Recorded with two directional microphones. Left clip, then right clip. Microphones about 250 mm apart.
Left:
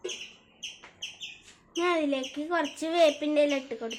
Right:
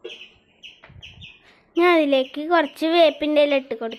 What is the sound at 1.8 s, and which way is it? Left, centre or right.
A woman's voice, right.